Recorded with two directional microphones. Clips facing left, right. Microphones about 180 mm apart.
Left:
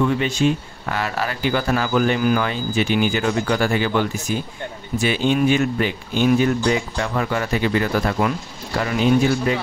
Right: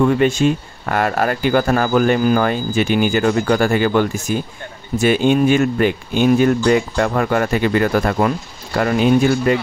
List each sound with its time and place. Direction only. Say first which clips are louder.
0.0 s speech: right 5 dB; 50° right (ahead or behind)